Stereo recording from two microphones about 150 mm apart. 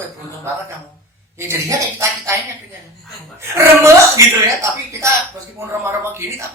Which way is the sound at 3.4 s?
20° right (ahead or behind).